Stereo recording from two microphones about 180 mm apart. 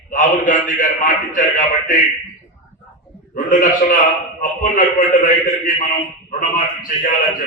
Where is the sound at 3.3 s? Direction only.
50° left (ahead or behind).